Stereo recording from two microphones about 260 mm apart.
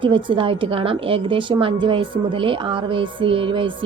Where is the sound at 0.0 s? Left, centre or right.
Centre.